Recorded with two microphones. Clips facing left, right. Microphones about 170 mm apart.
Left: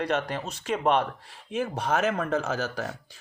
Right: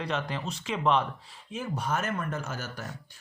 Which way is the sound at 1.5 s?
70° left (ahead or behind).